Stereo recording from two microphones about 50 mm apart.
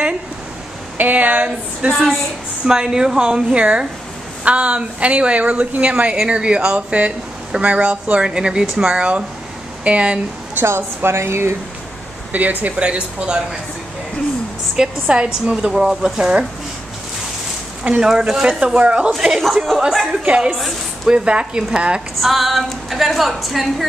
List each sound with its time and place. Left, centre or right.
0.9 s a sound: right
2.6 s a woman's voice: centre
10.6 s a woman's voice: right
12.3 s speech: right
15.0 s speech: right
15.5 s a woman's voice: centre
18.0 s a woman's voice: centre
19.1 s a woman's voice: centre
20.5 s a woman's voice: centre
21.1 s speech: right
22.2 s a woman's voice: centre